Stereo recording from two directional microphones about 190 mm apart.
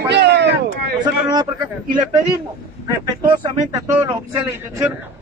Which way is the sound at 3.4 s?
15° right (ahead or behind).